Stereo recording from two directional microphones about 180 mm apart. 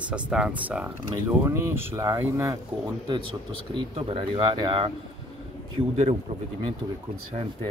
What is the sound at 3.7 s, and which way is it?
Speech, 30° right (ahead or behind).